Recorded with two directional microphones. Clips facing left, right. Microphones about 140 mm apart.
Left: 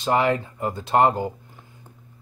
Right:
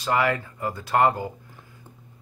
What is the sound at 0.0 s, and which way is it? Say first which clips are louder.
Speech: left 3 dB; 25° left (ahead or behind).